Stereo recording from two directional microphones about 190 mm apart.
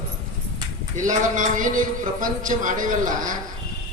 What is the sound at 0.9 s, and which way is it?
A man's voice, 40° right (ahead or behind).